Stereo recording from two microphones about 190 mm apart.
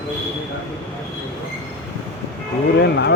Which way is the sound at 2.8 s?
60° left (ahead or behind).